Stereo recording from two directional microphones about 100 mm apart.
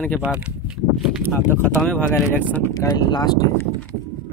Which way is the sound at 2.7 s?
35° left (ahead or behind).